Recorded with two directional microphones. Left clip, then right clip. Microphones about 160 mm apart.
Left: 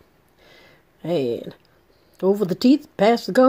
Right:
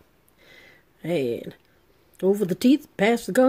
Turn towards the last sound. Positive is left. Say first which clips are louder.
# left 4 dB
turn(degrees=-15)  # may be behind; listen again after turning